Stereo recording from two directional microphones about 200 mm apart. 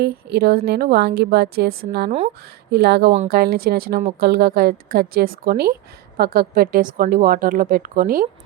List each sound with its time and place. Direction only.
0.0 s a woman's voice: 55° right (ahead or behind)
2.0 s speech: 35° right (ahead or behind)
2.7 s a woman's voice: 55° right (ahead or behind)